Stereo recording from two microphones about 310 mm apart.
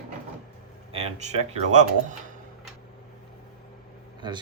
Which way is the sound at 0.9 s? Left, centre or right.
Right.